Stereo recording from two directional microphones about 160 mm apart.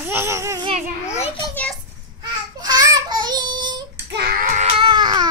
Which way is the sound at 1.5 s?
10° left (ahead or behind).